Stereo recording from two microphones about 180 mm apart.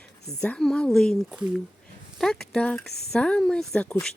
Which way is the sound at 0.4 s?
5° left (ahead or behind).